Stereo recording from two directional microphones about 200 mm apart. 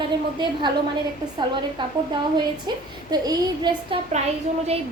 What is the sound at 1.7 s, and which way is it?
A woman's voice, 25° right (ahead or behind).